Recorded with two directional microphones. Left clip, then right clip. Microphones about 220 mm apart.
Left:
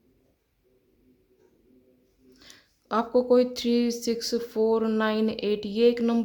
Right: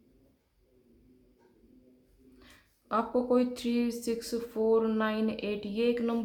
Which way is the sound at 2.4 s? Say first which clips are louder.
Left 7 dB; 35° left (ahead or behind).